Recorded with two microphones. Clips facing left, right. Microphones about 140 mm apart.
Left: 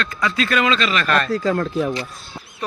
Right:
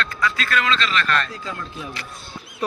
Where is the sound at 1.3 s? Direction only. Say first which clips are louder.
Left 13 dB; 40° left (ahead or behind).